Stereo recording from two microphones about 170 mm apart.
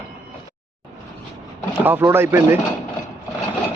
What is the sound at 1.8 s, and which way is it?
Speech, 10° right (ahead or behind).